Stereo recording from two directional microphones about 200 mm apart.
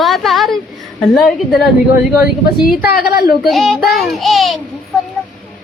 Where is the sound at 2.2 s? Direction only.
50° left (ahead or behind).